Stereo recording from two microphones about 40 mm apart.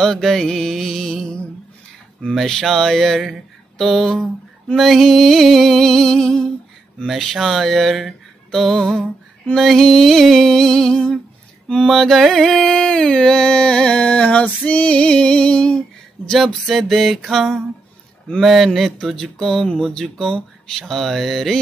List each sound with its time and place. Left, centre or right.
0.2 s music: centre
2.4 s speech: centre
4.7 s music: centre
7.1 s speech: centre
9.5 s music: centre; by 14.4 s left
14.7 s female singing: left
16.6 s speech: centre
19.3 s music: centre
20.8 s speech: centre